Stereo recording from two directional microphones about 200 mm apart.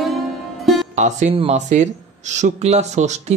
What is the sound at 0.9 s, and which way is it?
Speech, 35° right (ahead or behind).